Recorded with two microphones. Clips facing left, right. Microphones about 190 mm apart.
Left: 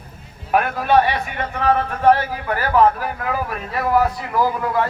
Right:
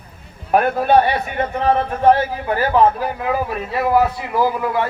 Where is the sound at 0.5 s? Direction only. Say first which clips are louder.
Right 2 dB; 35° right (ahead or behind); by 4.3 s 20° right (ahead or behind).